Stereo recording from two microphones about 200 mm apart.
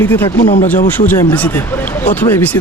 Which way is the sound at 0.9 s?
10° left (ahead or behind).